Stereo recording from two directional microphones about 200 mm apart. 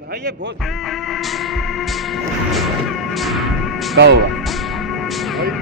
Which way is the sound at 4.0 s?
55° right (ahead or behind).